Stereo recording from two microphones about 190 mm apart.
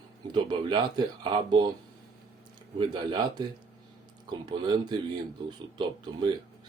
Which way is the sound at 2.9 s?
20° right (ahead or behind).